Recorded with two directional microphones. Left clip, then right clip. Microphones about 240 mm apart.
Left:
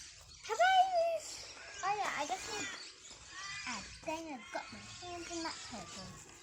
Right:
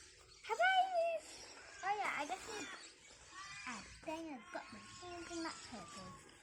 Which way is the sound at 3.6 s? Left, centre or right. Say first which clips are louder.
Left 3 dB; centre.